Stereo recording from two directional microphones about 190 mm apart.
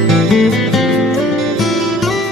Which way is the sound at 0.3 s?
Centre (ahead or behind).